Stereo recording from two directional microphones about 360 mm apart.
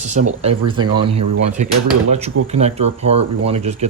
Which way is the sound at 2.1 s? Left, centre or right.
Centre.